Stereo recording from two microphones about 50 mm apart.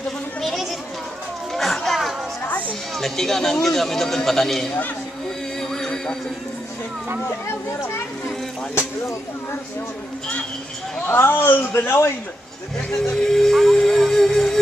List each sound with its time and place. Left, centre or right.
1.5 s a sound: centre
1.9 s chatter: centre
3.0 s a man's voice: centre
5.6 s music: centre
7.7 s speech: left
11.1 s a man's voice: left
12.7 s a man's voice: centre
13.7 s music: centre